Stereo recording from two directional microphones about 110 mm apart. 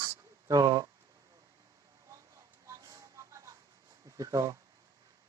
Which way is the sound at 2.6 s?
30° right (ahead or behind).